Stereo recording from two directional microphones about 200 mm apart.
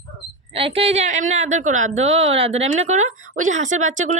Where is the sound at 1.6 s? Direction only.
90° right.